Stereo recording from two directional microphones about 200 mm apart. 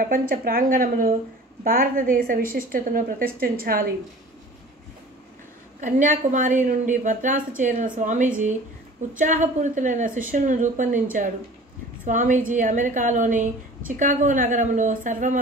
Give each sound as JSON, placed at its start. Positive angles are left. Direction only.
{"t": 0.0, "sound": "a woman's voice", "side_deg": -45}
{"t": 5.8, "sound": "a woman's voice", "side_deg": -40}